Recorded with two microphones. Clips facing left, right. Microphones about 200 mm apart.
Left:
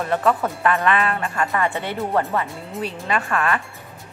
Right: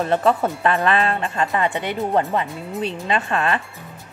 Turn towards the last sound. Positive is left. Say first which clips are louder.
# right 1 dB
turn(degrees=-25)  # may be behind; listen again after turning